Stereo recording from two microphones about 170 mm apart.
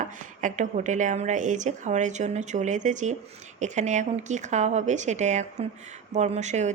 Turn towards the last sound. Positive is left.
turn(degrees=-45)  # may be behind; listen again after turning